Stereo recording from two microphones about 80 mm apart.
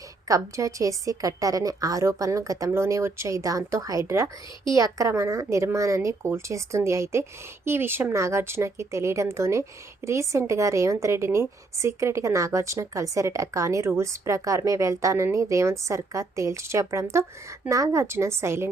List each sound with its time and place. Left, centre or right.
0.3 s a woman's voice: right